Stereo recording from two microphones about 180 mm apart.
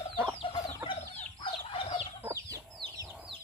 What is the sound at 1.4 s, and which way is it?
Chicken, 30° left (ahead or behind).